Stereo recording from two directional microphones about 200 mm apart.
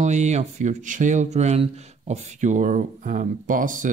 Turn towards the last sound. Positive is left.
turn(degrees=-40)  # may be behind; listen again after turning